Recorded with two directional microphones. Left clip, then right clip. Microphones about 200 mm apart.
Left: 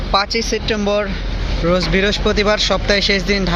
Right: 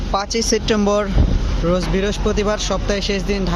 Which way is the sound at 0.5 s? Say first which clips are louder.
Right 2 dB; 25° right (ahead or behind).